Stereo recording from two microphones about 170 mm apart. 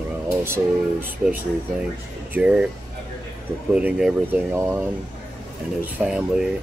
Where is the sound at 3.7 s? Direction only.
5° right (ahead or behind).